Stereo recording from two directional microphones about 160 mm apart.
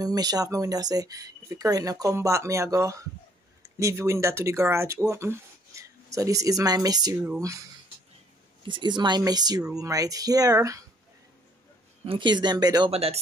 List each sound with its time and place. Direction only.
0.0 s speech: 25° right (ahead or behind)
8.6 s speech: 30° right (ahead or behind)
12.1 s speech: 30° right (ahead or behind)
12.9 s speech: 40° right (ahead or behind)